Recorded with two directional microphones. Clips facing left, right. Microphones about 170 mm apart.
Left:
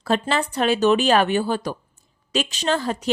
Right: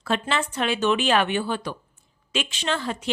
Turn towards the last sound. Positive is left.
turn(degrees=40)  # may be behind; listen again after turning